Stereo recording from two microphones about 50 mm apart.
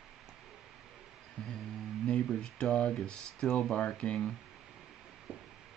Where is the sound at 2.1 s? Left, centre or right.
Centre.